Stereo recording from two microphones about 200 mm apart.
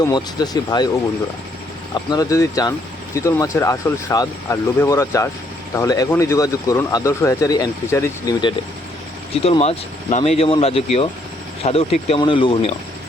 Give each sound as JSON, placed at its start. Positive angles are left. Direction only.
{"t": 0.0, "sound": "speech", "side_deg": 20}
{"t": 2.0, "sound": "speech", "side_deg": 15}